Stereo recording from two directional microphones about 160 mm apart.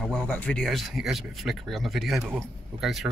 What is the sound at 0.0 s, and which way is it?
Speech, 5° left (ahead or behind).